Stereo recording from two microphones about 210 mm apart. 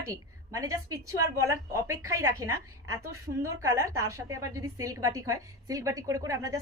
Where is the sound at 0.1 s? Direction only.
15° right (ahead or behind).